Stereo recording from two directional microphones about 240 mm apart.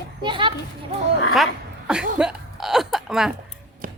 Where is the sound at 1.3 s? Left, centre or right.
Centre.